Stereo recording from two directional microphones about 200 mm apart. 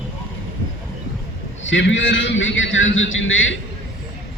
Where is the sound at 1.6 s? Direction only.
70° left (ahead or behind).